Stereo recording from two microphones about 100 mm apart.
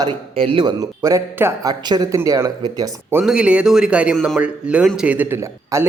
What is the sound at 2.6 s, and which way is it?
Speech, 45° right (ahead or behind).